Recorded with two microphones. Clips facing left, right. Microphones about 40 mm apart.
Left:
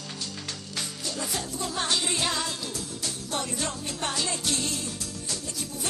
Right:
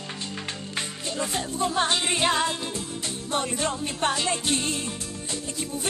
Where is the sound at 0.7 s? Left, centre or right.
Right.